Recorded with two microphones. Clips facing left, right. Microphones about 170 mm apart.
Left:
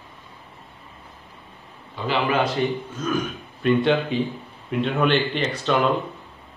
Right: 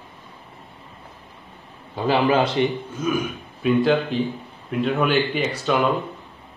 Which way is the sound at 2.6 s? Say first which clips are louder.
Right 2 dB; 20° right (ahead or behind).